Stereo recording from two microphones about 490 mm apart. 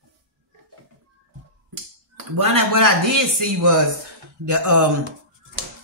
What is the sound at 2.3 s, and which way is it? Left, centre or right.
A man's voice, right.